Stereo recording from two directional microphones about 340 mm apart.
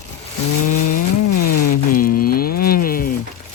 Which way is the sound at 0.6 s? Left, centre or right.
Left.